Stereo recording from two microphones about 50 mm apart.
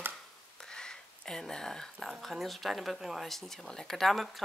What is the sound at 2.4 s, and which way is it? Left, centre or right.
Speech, centre.